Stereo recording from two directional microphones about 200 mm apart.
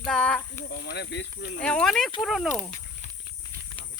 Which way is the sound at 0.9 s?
55° left (ahead or behind).